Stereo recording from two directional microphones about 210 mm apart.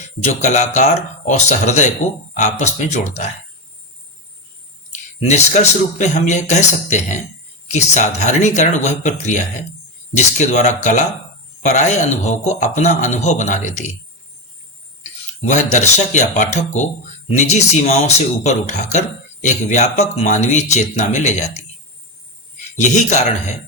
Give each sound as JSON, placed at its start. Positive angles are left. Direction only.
{"t": 0.3, "sound": "speech", "side_deg": 35}
{"t": 4.9, "sound": "speech", "side_deg": 35}
{"t": 15.4, "sound": "speech", "side_deg": 35}
{"t": 22.8, "sound": "speech", "side_deg": 35}